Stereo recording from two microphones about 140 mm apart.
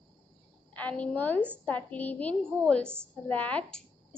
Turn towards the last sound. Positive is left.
turn(degrees=5)  # may be behind; listen again after turning